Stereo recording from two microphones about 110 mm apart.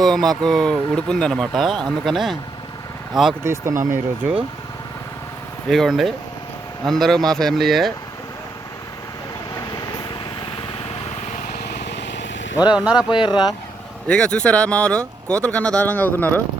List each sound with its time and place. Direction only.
0.0 s speech: centre (ahead or behind)
3.4 s speech: 25° right (ahead or behind)
5.6 s speech: 5° left (ahead or behind)
12.7 s speech: 10° right (ahead or behind)
13.1 s speech: 45° left (ahead or behind)
14.1 s speech: 10° left (ahead or behind)